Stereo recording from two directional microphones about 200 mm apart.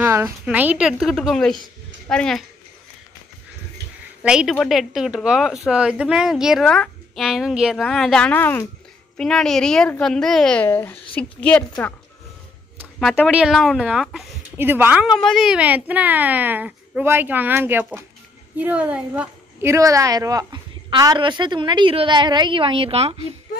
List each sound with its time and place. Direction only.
0.0 s speech: 10° right (ahead or behind)
4.2 s a woman's voice: 5° right (ahead or behind); by 23.1 s 30° right (ahead or behind)